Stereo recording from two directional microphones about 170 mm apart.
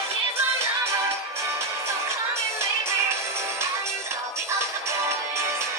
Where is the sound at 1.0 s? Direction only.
15° right (ahead or behind).